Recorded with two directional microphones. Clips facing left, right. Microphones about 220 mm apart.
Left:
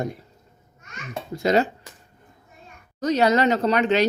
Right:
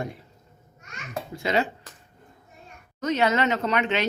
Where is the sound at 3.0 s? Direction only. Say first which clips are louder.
Left 4 dB; 35° left (ahead or behind).